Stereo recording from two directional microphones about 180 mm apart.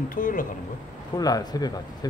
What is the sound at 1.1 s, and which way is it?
Speech, 20° left (ahead or behind).